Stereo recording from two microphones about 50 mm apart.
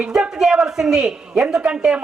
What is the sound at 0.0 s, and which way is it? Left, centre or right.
A man's voice, centre.